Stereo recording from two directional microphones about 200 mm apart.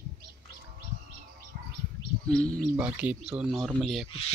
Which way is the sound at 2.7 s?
5° right (ahead or behind).